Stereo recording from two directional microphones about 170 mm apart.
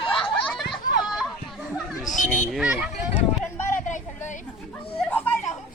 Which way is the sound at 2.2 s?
50° left (ahead or behind).